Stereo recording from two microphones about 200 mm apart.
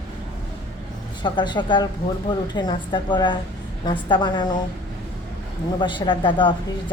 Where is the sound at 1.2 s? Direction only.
20° left (ahead or behind).